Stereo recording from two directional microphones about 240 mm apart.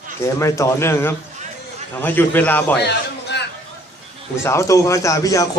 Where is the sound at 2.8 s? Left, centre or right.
Left.